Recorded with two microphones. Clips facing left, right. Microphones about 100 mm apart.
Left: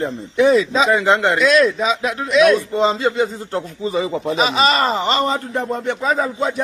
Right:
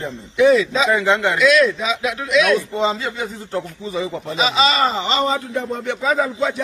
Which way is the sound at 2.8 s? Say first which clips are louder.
Left 3 dB; 25° left (ahead or behind).